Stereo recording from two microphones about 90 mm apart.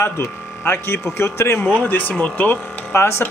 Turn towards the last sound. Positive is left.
turn(degrees=25)  # may be behind; listen again after turning